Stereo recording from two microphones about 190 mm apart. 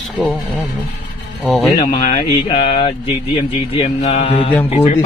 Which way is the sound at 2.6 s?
30° left (ahead or behind).